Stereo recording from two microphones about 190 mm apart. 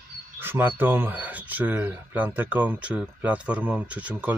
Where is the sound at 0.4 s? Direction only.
10° right (ahead or behind).